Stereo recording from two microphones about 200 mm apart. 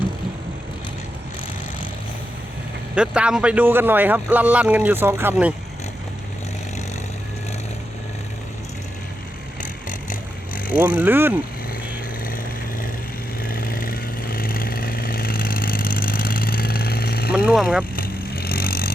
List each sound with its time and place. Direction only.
2.9 s speech: 5° right (ahead or behind)
10.8 s speech: 10° right (ahead or behind)
13.4 s vehicle: 45° left (ahead or behind)
17.3 s speech: 5° right (ahead or behind)
17.9 s vehicle: 45° left (ahead or behind)